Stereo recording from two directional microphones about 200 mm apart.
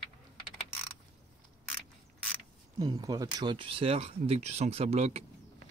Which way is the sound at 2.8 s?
20° right (ahead or behind).